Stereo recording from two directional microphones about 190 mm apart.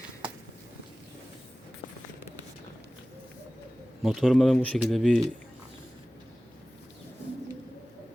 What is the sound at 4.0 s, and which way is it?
Speech, centre (ahead or behind).